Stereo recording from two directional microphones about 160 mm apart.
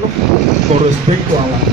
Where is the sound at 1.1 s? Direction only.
40° right (ahead or behind).